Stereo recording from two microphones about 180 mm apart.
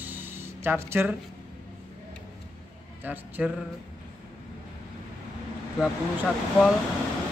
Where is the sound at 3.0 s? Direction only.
10° right (ahead or behind).